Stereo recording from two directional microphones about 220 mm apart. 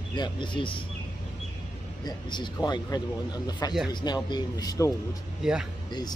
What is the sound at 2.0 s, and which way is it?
A man's voice, 20° left (ahead or behind).